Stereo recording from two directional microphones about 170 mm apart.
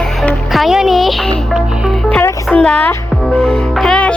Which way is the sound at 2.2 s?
15° left (ahead or behind).